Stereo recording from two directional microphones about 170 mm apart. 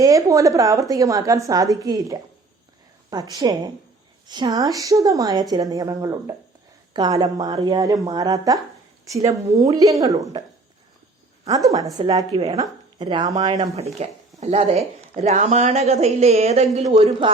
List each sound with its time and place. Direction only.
0.0 s a woman's voice: 20° right (ahead or behind)
11.4 s a woman's voice: 20° right (ahead or behind)